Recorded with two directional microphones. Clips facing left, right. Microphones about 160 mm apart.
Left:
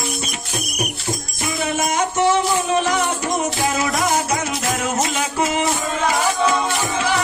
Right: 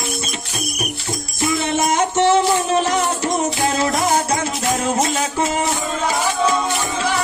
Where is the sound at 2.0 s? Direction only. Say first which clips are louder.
Right 2 dB; 30° right (ahead or behind).